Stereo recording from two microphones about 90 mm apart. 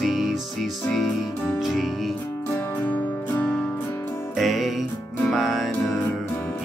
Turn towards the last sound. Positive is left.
turn(degrees=0)  # may be behind; listen again after turning